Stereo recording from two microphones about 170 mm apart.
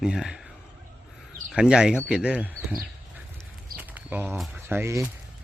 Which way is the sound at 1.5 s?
5° right (ahead or behind).